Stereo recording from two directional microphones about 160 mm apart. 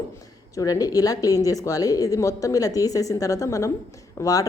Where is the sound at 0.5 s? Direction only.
20° left (ahead or behind).